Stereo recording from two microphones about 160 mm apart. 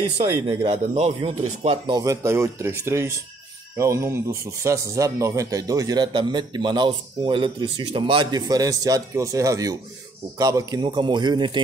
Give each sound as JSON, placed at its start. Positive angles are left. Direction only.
{"t": 0.5, "sound": "a man's voice", "side_deg": -35}
{"t": 2.0, "sound": "speech", "side_deg": -20}